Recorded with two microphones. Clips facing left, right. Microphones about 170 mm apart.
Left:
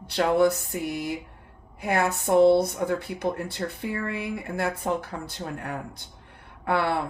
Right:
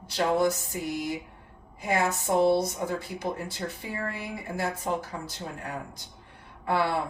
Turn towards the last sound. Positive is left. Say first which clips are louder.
# left 2 dB
turn(degrees=60)  # may be behind; listen again after turning